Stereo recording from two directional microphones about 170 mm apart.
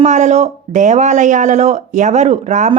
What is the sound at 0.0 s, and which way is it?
Speech, 45° right (ahead or behind).